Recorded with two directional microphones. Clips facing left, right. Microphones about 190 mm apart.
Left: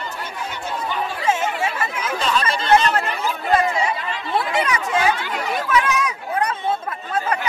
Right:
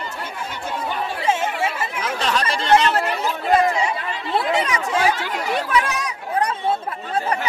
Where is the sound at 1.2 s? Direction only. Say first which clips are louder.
Even; 30° right (ahead or behind).